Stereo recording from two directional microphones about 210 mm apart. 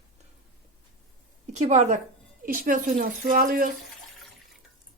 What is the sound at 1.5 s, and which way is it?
Speech, 35° right (ahead or behind).